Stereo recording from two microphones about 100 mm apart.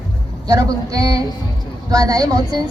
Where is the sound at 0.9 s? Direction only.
35° right (ahead or behind).